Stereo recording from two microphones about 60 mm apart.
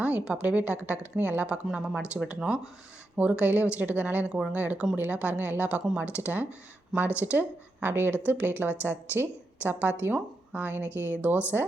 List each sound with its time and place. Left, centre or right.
0.0 s speech: centre
1.6 s speech: centre; by 4.3 s right
4.3 s speech: centre
4.5 s a woman's voice: right